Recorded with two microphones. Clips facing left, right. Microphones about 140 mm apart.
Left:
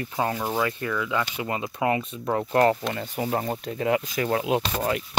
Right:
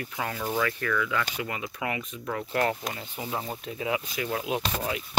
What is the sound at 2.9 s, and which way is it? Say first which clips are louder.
Speech: left 7 dB; 55° left (ahead or behind).